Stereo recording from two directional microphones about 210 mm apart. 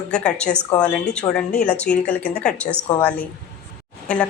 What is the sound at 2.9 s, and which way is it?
Speech, 20° left (ahead or behind).